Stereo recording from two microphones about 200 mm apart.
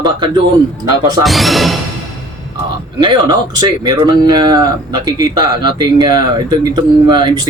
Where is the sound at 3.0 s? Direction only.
20° right (ahead or behind).